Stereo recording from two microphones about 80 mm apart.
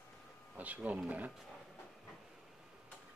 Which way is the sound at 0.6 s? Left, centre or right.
Centre.